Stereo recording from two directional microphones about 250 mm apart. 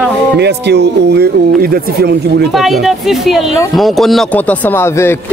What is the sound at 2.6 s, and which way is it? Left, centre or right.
A man's voice, centre.